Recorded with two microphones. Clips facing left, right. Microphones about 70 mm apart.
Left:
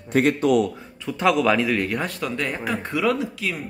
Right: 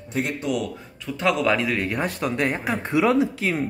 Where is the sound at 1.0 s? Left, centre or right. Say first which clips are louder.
Left 2 dB; centre.